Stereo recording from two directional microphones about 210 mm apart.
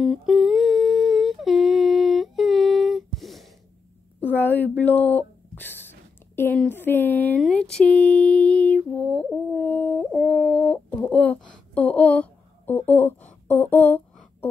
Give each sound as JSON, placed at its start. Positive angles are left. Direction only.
{"t": 0.0, "sound": "humming", "side_deg": 0}
{"t": 4.4, "sound": "speech", "side_deg": 10}
{"t": 9.0, "sound": "a sound", "side_deg": 5}